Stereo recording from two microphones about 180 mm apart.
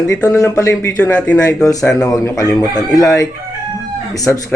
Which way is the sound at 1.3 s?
20° left (ahead or behind).